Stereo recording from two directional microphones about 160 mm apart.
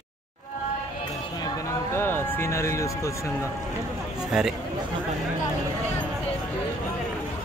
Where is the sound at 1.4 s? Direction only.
15° left (ahead or behind).